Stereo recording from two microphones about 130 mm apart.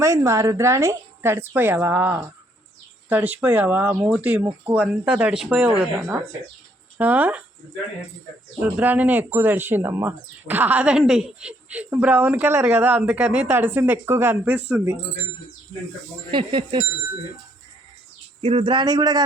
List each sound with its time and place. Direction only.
0.0 s a woman's voice: 25° right (ahead or behind)
8.6 s speech: 10° right (ahead or behind)
16.3 s a man's voice: 40° right (ahead or behind)
18.4 s a man's voice: 40° right (ahead or behind)